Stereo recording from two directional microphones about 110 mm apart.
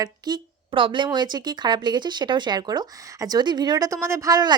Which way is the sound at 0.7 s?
50° right (ahead or behind).